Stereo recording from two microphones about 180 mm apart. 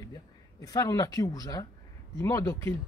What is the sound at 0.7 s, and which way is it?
Speech, 20° left (ahead or behind).